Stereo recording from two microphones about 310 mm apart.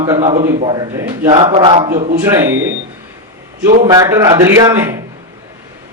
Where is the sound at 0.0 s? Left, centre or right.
Centre.